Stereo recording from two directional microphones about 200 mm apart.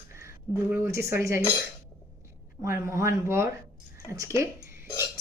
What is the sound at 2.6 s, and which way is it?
Speech, 15° right (ahead or behind).